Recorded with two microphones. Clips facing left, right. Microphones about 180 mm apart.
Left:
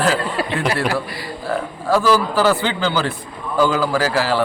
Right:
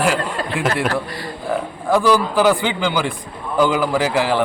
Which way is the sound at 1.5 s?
15° right (ahead or behind).